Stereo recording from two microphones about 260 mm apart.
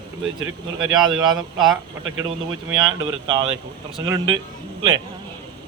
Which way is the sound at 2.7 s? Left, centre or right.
Centre.